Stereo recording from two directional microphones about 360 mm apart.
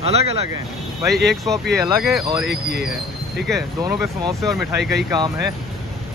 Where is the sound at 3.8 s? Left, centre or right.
Centre.